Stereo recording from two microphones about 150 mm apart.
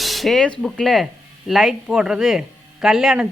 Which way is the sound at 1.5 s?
Centre (ahead or behind).